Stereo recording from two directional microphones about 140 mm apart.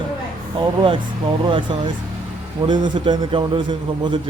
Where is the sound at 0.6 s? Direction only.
40° right (ahead or behind).